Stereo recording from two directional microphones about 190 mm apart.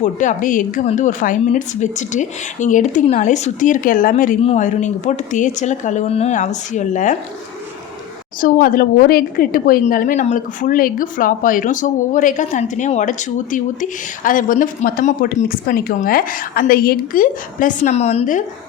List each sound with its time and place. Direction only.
0.0 s speech: 40° left (ahead or behind)
8.4 s a woman's voice: 50° left (ahead or behind)